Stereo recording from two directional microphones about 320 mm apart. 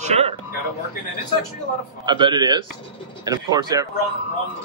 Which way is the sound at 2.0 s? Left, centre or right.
Centre.